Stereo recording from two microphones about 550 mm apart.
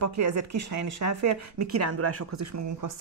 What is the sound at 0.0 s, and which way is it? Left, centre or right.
Speech, right.